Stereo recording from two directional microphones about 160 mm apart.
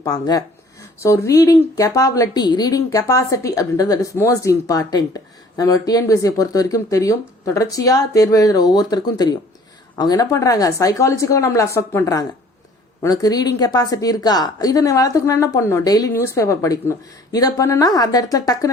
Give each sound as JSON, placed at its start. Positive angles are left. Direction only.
{"t": 0.0, "sound": "speech", "side_deg": 25}